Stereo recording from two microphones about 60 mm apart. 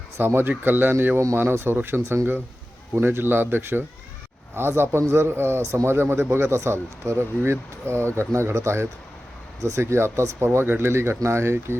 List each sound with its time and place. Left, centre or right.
0.3 s a man's voice: right